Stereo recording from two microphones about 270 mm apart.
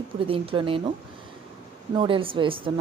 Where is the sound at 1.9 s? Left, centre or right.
Centre.